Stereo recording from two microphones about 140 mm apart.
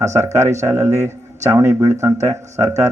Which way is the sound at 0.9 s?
55° right (ahead or behind).